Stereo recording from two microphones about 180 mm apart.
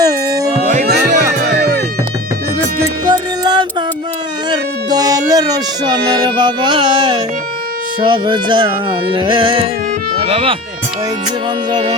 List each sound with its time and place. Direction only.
0.0 s music: 20° right (ahead or behind)
0.6 s music: 40° right (ahead or behind)
1.5 s music: 65° right (ahead or behind)
3.1 s music: 25° right (ahead or behind)
11.7 s music: 25° right (ahead or behind)